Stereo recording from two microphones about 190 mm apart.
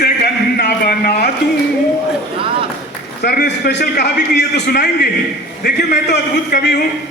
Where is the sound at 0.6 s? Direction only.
55° left (ahead or behind).